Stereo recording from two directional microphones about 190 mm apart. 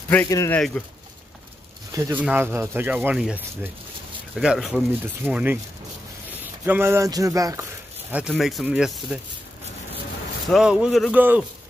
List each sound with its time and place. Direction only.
0.1 s speech: 15° left (ahead or behind)
1.9 s speech: 15° right (ahead or behind)
8.3 s speech: centre (ahead or behind)
10.5 s speech: 5° right (ahead or behind)